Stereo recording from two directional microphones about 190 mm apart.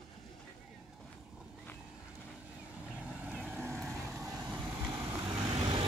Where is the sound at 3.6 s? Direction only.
15° right (ahead or behind).